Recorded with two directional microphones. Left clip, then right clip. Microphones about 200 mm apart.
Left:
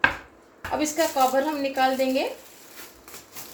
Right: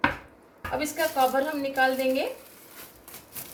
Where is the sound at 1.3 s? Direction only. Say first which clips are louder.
Left 2 dB; 20° left (ahead or behind).